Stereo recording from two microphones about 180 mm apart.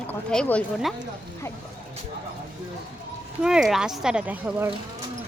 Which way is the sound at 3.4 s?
5° right (ahead or behind).